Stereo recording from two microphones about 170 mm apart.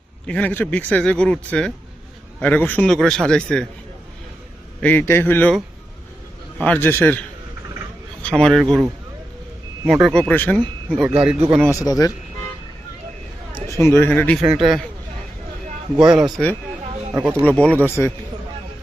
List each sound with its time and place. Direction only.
0.3 s a man's voice: 10° left (ahead or behind)
4.8 s a man's voice: 10° left (ahead or behind)
6.6 s a man's voice: 10° left (ahead or behind)
8.2 s speech: 5° left (ahead or behind)
9.8 s speech: centre (ahead or behind)
11.8 s speech: 20° left (ahead or behind)
13.7 s a man's voice: 15° left (ahead or behind)
14.4 s speech: 5° right (ahead or behind)
16.0 s a man's voice: 25° right (ahead or behind)
16.3 s a man's voice: 10° left (ahead or behind)
17.2 s speech: 15° right (ahead or behind)
17.5 s a man's voice: 5° left (ahead or behind)